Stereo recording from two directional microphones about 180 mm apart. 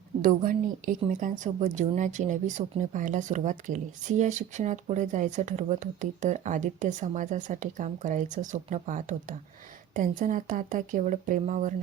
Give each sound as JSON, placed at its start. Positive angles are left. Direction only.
{"t": 0.2, "sound": "a woman's voice", "side_deg": -45}